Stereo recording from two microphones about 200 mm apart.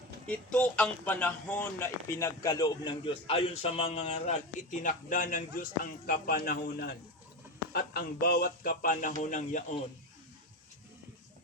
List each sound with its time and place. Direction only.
0.3 s a man's voice: 5° left (ahead or behind); by 9.7 s 40° left (ahead or behind)